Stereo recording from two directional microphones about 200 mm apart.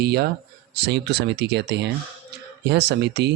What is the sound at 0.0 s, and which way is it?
Speech, 55° right (ahead or behind).